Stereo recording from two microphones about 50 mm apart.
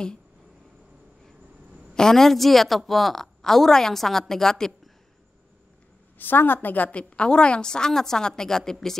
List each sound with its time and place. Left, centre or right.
2.0 s a woman's voice: centre
6.1 s a woman's voice: left
7.0 s a woman's voice: left